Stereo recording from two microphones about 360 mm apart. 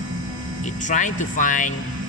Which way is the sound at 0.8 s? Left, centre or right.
Left.